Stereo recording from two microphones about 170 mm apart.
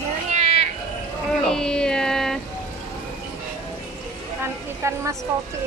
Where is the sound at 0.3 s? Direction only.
40° right (ahead or behind).